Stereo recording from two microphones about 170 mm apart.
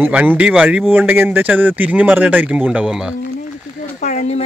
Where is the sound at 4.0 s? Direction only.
45° left (ahead or behind).